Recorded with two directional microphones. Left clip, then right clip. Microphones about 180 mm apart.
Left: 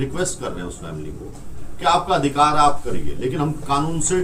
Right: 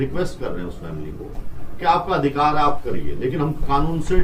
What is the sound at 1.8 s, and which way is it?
Speech, 5° left (ahead or behind).